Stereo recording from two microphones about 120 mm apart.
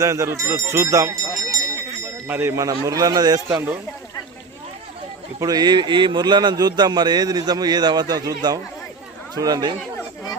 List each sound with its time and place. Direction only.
0.0 s speech: 25° right (ahead or behind)
5.4 s speech: 35° right (ahead or behind)